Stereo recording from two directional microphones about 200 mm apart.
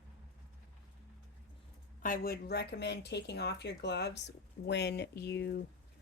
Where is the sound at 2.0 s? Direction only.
45° left (ahead or behind).